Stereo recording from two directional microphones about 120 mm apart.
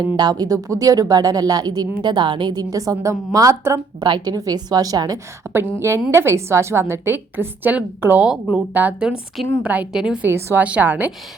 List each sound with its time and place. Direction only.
0.2 s a woman's voice: 35° right (ahead or behind)
4.0 s a woman's voice: 35° right (ahead or behind); by 10.2 s 5° right (ahead or behind)
10.2 s a woman's voice: 20° right (ahead or behind)